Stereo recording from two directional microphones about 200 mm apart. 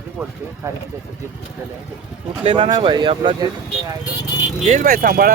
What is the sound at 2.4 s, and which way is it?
Speech, 25° right (ahead or behind).